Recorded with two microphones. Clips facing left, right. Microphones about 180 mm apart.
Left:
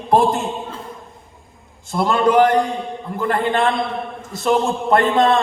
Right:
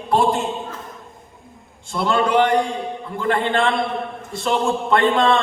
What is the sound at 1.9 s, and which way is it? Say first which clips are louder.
A man's voice: left 3 dB; 45° left (ahead or behind).